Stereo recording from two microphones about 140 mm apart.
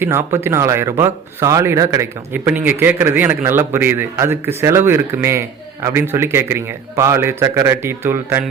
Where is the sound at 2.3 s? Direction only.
15° right (ahead or behind).